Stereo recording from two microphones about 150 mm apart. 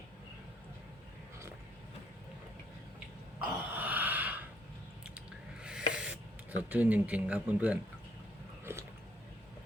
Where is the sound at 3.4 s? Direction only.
10° right (ahead or behind).